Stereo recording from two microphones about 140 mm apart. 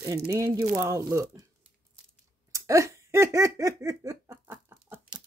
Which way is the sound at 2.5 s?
20° right (ahead or behind).